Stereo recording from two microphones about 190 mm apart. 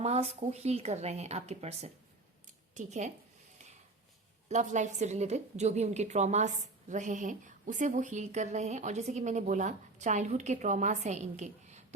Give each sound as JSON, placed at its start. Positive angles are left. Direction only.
{"t": 0.0, "sound": "a woman's voice", "side_deg": -35}
{"t": 4.4, "sound": "a woman's voice", "side_deg": -40}